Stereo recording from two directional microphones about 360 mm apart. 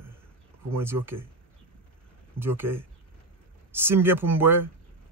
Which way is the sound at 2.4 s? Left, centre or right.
Centre.